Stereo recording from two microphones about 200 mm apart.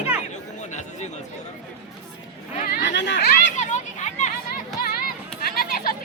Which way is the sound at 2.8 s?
60° left (ahead or behind).